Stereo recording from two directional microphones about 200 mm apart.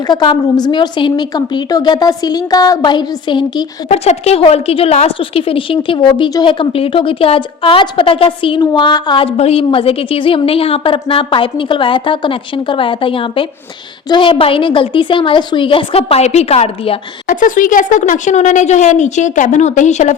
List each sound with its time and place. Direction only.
0.1 s a woman's voice: 20° left (ahead or behind)
17.2 s speech: 40° left (ahead or behind)